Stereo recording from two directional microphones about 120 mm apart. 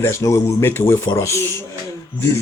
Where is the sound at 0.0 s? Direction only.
25° left (ahead or behind).